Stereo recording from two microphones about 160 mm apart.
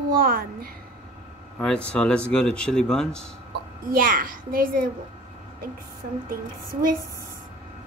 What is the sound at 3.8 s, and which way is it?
A woman's voice, 65° right (ahead or behind).